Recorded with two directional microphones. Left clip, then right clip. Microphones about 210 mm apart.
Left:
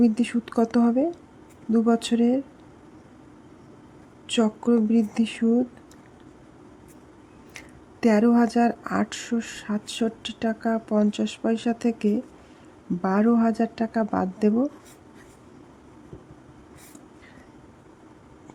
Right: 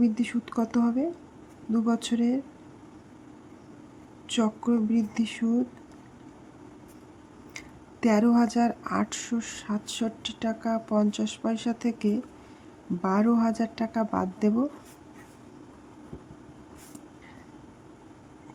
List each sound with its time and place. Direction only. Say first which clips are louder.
0.0 s speech: left 4 dB; 15° left (ahead or behind)
4.3 s speech: left 5 dB; 15° left (ahead or behind)
8.0 s speech: left 3 dB; 15° left (ahead or behind)